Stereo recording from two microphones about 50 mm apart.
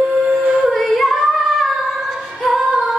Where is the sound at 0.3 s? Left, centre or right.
Right.